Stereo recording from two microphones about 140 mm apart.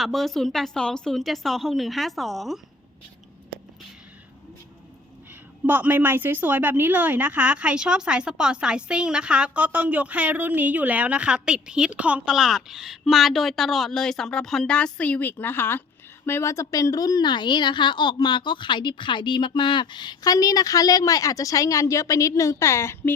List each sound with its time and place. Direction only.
0.0 s a woman's voice: centre (ahead or behind)
5.3 s a woman's voice: 10° right (ahead or behind); by 23.1 s 20° left (ahead or behind)